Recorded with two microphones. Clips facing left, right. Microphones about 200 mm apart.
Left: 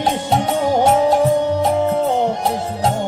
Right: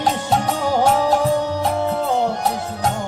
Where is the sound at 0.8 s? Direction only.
25° left (ahead or behind).